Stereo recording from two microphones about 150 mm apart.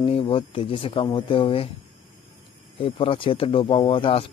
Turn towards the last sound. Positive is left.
turn(degrees=35)  # may be behind; listen again after turning